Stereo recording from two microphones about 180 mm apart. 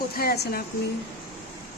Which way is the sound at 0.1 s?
55° left (ahead or behind).